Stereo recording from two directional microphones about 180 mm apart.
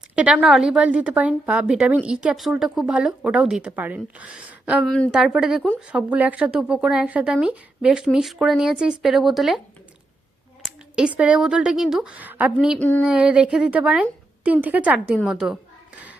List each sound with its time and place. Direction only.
0.2 s a woman's voice: 5° right (ahead or behind)
4.9 s a woman's voice: 5° left (ahead or behind)
5.1 s a woman's voice: 5° right (ahead or behind)
10.6 s speech: 5° right (ahead or behind)
12.8 s a woman's voice: 10° left (ahead or behind)
13.1 s a woman's voice: 5° right (ahead or behind)